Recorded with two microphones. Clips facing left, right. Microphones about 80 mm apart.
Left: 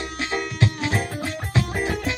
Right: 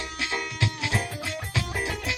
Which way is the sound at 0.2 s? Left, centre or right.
Left.